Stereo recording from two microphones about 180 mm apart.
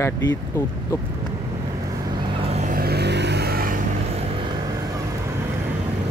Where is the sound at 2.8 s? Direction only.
65° right (ahead or behind).